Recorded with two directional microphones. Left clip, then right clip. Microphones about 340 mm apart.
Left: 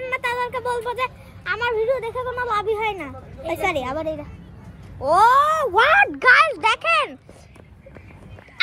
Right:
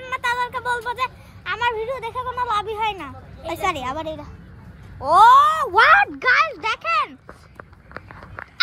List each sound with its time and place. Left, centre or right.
0.0 s speech: centre
6.1 s speech: centre